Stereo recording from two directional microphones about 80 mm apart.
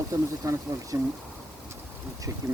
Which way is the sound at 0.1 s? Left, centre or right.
Right.